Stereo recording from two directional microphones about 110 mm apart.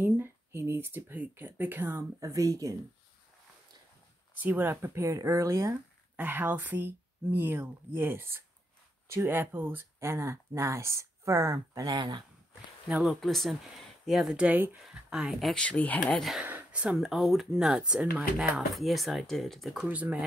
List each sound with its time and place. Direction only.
0.0 s speech: 20° right (ahead or behind)
4.4 s speech: 15° right (ahead or behind)
6.1 s speech: 15° right (ahead or behind); by 12.2 s 40° right (ahead or behind)
12.8 s speech: 5° right (ahead or behind)
14.8 s speech: 5° right (ahead or behind)
15.6 s speech: 10° left (ahead or behind)
16.4 s speech: 15° right (ahead or behind)
19.9 s speech: 15° right (ahead or behind)